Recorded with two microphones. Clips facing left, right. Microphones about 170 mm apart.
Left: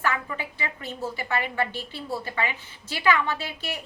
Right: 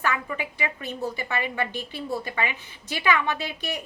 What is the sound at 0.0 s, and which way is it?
A woman's voice, 15° right (ahead or behind).